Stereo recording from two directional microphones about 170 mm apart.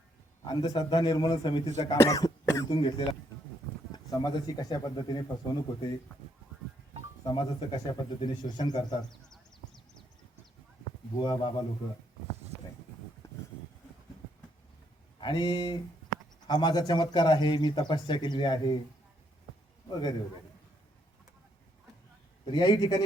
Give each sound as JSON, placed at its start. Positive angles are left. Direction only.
{"t": 0.4, "sound": "speech", "side_deg": 25}
{"t": 7.3, "sound": "speech", "side_deg": 30}
{"t": 11.2, "sound": "speech", "side_deg": 25}
{"t": 15.2, "sound": "speech", "side_deg": 25}
{"t": 19.9, "sound": "speech", "side_deg": 25}
{"t": 22.4, "sound": "speech", "side_deg": 25}